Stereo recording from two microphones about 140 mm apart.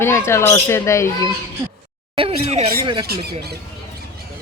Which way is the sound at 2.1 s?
45° right (ahead or behind).